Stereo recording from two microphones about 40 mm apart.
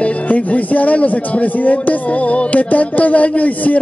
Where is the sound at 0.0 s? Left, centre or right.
Left.